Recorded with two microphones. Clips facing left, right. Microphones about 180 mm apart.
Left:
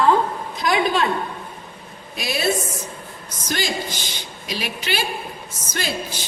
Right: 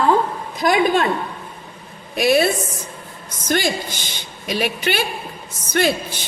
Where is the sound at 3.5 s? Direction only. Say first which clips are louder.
Right 5 dB; 55° right (ahead or behind).